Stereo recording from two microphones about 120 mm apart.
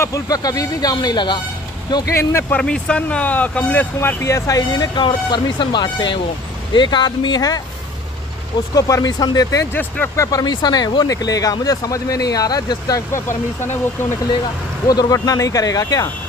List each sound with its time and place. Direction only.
0.0 s speech: 30° left (ahead or behind)
2.5 s speech: 10° left (ahead or behind); by 7.6 s 35° left (ahead or behind)
8.7 s speech: 30° left (ahead or behind)
9.7 s speech: 15° left (ahead or behind)
10.2 s speech: 35° left (ahead or behind)
14.9 s speech: 30° left (ahead or behind)